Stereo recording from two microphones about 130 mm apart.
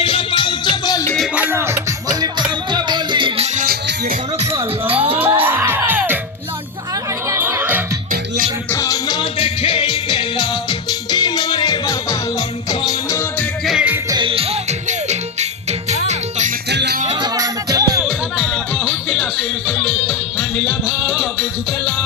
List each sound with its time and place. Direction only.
0.0 s music: 45° left (ahead or behind)
1.4 s music: 15° right (ahead or behind)
2.2 s music: 35° right (ahead or behind)
3.4 s music: 70° right (ahead or behind)
5.1 s music: 15° right (ahead or behind)
7.3 s music: 20° right (ahead or behind)
8.7 s music: 25° left (ahead or behind)
9.4 s music: 45° left (ahead or behind)
12.8 s music: 25° left (ahead or behind)
13.7 s music: 5° right (ahead or behind)
14.1 s music: 40° right (ahead or behind); by 16.5 s 60° right (ahead or behind)
17.2 s music: 30° right (ahead or behind)
18.0 s music: 5° right (ahead or behind)